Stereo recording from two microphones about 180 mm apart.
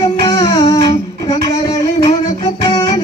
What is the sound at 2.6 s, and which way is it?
Music, 20° left (ahead or behind).